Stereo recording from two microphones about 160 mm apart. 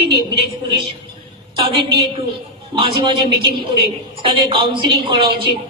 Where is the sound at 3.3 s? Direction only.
75° right (ahead or behind).